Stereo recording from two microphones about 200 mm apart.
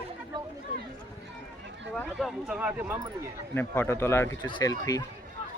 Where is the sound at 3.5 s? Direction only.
10° left (ahead or behind).